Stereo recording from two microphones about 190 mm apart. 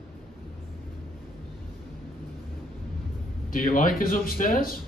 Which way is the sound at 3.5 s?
45° left (ahead or behind).